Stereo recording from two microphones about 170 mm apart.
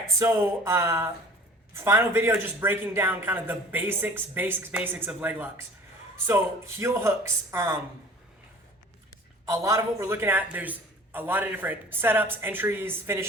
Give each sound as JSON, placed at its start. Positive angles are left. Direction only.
{"t": 0.2, "sound": "speech", "side_deg": -15}
{"t": 9.5, "sound": "speech", "side_deg": -15}